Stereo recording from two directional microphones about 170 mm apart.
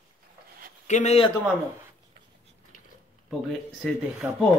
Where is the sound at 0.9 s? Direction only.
40° left (ahead or behind).